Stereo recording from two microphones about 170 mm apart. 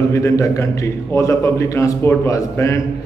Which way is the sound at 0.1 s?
15° left (ahead or behind).